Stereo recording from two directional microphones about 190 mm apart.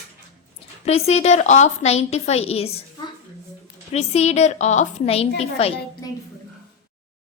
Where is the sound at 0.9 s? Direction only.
35° left (ahead or behind).